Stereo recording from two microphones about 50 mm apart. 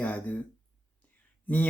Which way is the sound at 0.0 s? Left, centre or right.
Left.